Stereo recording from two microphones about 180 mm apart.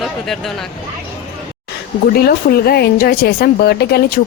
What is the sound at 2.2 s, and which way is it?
Speech, 60° left (ahead or behind).